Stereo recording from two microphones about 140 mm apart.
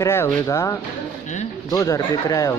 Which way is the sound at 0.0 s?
15° left (ahead or behind).